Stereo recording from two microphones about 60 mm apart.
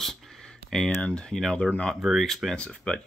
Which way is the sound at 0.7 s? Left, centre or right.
Centre.